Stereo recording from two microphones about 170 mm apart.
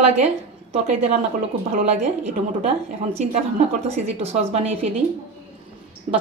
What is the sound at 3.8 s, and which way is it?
Speech, 40° right (ahead or behind).